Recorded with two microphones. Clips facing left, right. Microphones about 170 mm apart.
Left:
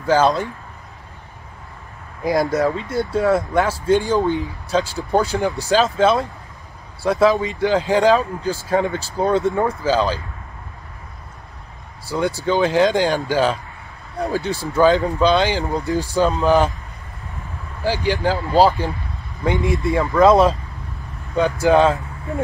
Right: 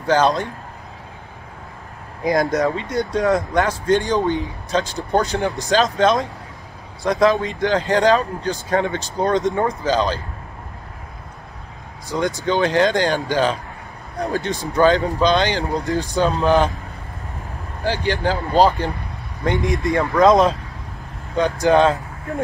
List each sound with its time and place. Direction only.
0.0 s speech: 5° left (ahead or behind)
2.2 s speech: centre (ahead or behind)
12.2 s speech: 5° left (ahead or behind)
18.0 s speech: 5° left (ahead or behind)
18.5 s speech: 20° right (ahead or behind)
19.4 s speech: 5° left (ahead or behind)